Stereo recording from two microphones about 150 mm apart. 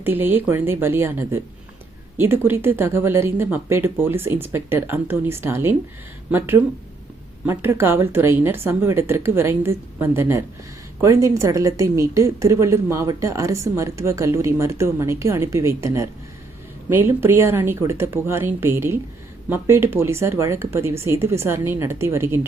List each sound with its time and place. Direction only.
0.0 s a woman's voice: 15° right (ahead or behind)